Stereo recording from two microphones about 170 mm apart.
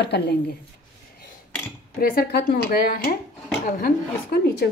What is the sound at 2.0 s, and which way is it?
Speech, 65° left (ahead or behind).